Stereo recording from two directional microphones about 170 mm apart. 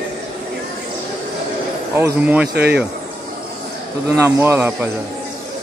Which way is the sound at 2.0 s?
10° right (ahead or behind).